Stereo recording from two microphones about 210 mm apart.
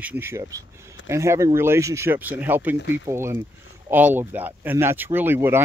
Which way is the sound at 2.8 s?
55° left (ahead or behind).